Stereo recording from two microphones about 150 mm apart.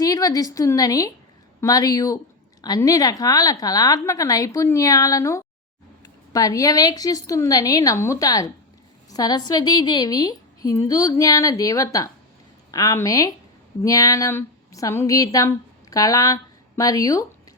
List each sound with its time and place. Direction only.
0.0 s a woman's voice: 25° left (ahead or behind)